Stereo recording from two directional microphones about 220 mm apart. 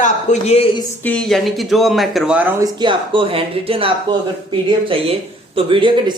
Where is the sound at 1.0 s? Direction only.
5° left (ahead or behind).